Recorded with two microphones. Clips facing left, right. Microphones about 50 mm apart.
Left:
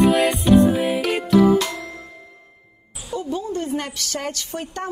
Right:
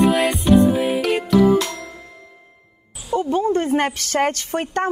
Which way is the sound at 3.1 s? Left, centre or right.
Right.